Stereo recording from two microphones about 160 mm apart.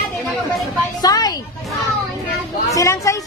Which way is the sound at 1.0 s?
25° left (ahead or behind).